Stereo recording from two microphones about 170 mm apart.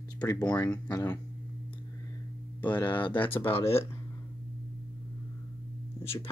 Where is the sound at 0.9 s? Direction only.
15° left (ahead or behind).